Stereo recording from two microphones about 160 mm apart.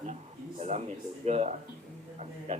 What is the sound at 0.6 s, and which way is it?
A man's voice, 45° right (ahead or behind).